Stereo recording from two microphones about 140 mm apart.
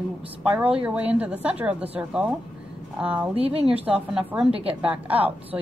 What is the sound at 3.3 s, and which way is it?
Speech, 45° right (ahead or behind).